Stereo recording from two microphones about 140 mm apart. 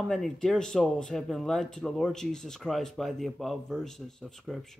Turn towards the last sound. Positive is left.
turn(degrees=0)  # may be behind; listen again after turning